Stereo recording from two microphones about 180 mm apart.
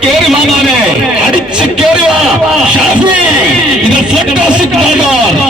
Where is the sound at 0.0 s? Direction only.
Centre (ahead or behind).